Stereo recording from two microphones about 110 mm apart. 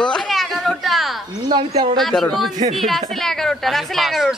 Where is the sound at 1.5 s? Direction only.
40° right (ahead or behind).